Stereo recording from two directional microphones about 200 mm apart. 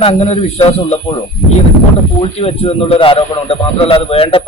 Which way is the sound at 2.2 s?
30° left (ahead or behind).